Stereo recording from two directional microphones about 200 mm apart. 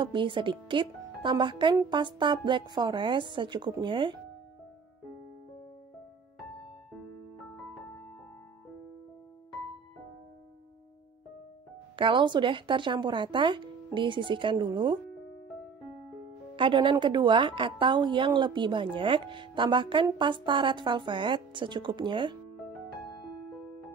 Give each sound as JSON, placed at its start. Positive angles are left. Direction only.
{"t": 0.0, "sound": "speech", "side_deg": -25}
{"t": 12.0, "sound": "speech", "side_deg": -25}
{"t": 16.5, "sound": "speech", "side_deg": -25}
{"t": 22.6, "sound": "music", "side_deg": 0}